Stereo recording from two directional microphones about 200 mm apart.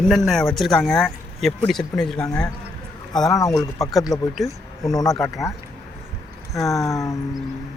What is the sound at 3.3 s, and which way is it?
Speech, 15° left (ahead or behind).